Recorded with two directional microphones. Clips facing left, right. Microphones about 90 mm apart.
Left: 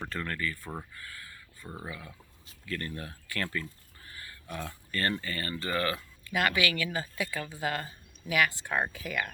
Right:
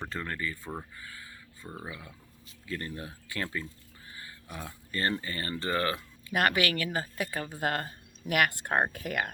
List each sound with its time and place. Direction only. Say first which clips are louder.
0.1 s speech: left 1 dB; 20° right (ahead or behind)
1.6 s speech: even; centre (ahead or behind)
2.6 s speech: even; 20° right (ahead or behind)
4.9 s speech: right 1 dB; 20° right (ahead or behind)
6.5 s speech: right 1 dB; 40° right (ahead or behind)